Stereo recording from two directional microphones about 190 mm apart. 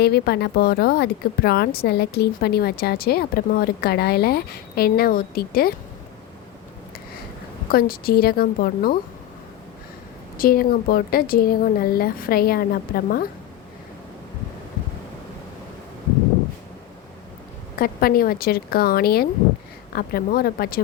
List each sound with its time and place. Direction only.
0.0 s a woman's voice: 60° left (ahead or behind)
7.7 s a woman's voice: 50° left (ahead or behind)
10.3 s a woman's voice: 50° left (ahead or behind)
17.7 s a woman's voice: 50° left (ahead or behind)